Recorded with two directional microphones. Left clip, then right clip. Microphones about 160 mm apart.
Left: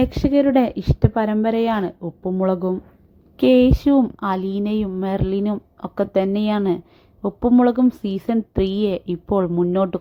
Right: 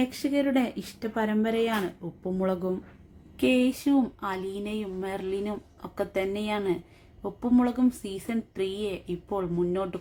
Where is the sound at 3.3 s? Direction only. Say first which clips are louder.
Left 10 dB; 45° left (ahead or behind).